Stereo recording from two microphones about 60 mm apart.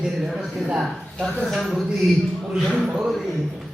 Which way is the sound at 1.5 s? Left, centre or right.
Centre.